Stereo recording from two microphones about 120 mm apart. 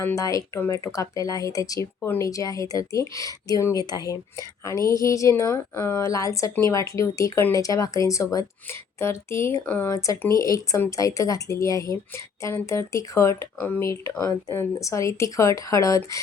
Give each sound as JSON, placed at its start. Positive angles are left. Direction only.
{"t": 0.2, "sound": "speech", "side_deg": 30}